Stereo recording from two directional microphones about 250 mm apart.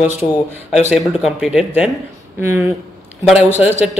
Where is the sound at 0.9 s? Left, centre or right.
Centre.